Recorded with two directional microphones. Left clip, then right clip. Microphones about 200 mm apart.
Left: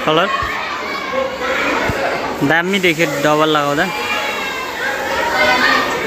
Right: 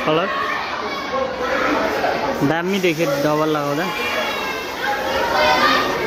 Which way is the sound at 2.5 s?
Centre (ahead or behind).